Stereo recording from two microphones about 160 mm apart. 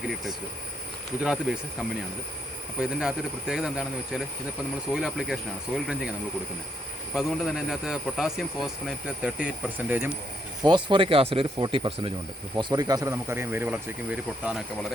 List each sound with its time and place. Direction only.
1.2 s speech: 5° right (ahead or behind)
2.8 s speech: 5° right (ahead or behind)
10.6 s speech: 30° right (ahead or behind); by 14.9 s centre (ahead or behind)